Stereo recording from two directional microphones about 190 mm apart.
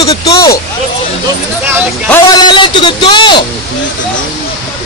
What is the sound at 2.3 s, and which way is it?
A man's voice, 25° left (ahead or behind).